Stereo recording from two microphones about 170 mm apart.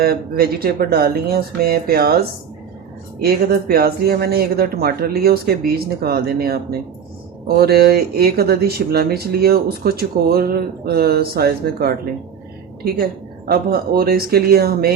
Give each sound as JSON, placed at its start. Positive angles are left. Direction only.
{"t": 0.0, "sound": "speech", "side_deg": -65}